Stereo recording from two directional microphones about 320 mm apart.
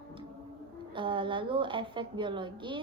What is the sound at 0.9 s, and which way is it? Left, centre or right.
A woman's voice, centre.